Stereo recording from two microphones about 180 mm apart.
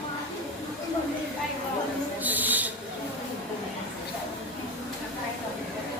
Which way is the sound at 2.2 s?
10° right (ahead or behind).